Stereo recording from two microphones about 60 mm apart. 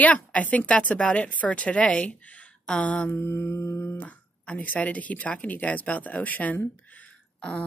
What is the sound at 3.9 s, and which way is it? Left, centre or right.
A woman's voice, left.